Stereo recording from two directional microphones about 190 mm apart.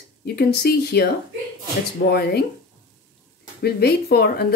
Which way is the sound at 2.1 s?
55° left (ahead or behind).